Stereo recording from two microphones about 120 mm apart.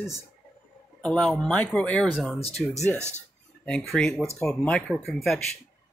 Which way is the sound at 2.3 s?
55° left (ahead or behind).